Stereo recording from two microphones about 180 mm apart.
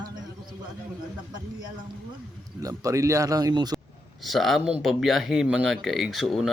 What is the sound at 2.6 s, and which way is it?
Speech, 20° right (ahead or behind).